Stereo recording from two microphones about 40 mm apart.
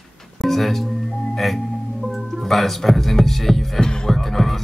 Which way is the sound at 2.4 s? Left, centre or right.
Centre.